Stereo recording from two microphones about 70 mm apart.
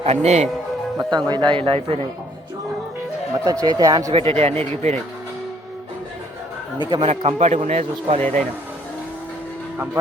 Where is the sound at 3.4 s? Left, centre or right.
Right.